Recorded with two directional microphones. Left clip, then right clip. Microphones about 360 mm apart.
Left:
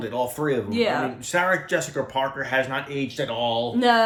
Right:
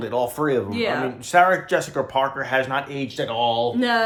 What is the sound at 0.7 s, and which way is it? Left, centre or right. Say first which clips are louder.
Speech: even; centre.